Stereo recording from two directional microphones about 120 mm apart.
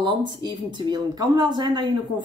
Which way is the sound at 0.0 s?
40° right (ahead or behind).